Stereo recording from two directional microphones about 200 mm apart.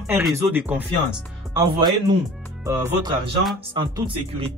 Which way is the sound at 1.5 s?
20° right (ahead or behind).